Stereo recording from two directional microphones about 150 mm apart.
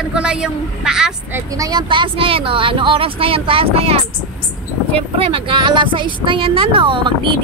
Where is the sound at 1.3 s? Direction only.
25° right (ahead or behind); by 3.9 s 40° right (ahead or behind).